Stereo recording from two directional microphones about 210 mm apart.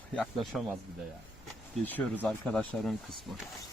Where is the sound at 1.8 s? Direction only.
10° left (ahead or behind).